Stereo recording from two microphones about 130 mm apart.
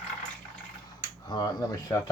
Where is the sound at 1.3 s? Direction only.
35° left (ahead or behind).